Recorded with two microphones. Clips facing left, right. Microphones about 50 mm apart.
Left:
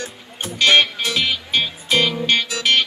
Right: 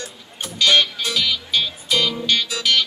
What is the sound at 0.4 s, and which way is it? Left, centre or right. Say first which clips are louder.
Music: left 2 dB; left.